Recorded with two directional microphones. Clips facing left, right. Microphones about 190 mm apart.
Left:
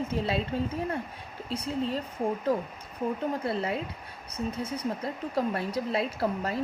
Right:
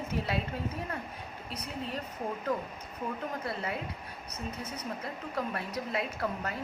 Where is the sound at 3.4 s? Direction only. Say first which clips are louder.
Left 5 dB; 30° left (ahead or behind).